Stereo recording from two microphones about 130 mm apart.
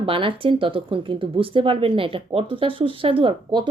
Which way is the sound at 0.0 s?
45° right (ahead or behind).